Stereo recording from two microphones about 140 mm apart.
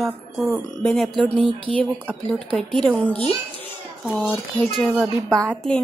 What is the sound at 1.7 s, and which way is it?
Speech, 45° right (ahead or behind).